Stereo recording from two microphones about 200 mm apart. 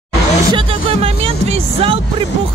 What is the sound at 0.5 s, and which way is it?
Speech, 25° right (ahead or behind).